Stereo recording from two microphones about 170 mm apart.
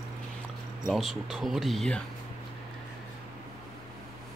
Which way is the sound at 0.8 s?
Centre (ahead or behind).